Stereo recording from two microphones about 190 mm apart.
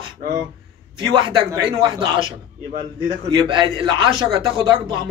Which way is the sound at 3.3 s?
25° right (ahead or behind).